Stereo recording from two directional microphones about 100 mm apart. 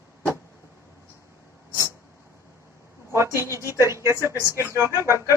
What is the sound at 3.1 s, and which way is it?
A woman's voice, 25° right (ahead or behind).